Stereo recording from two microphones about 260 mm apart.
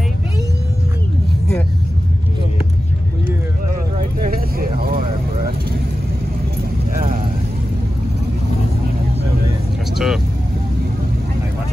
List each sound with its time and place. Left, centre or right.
4.2 s vehicle: right
9.9 s vehicle: centre